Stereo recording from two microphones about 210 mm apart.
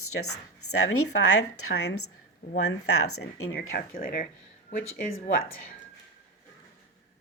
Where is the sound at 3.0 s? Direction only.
90° left.